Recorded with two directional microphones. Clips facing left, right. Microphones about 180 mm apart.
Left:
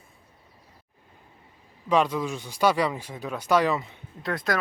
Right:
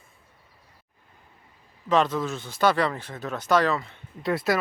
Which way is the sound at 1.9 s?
10° left (ahead or behind).